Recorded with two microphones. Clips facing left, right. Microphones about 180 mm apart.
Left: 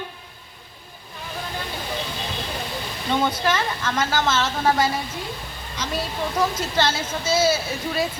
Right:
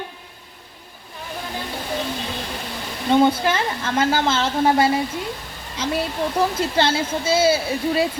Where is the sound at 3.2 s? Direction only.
30° right (ahead or behind).